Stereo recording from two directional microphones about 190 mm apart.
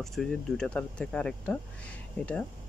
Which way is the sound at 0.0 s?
Centre (ahead or behind).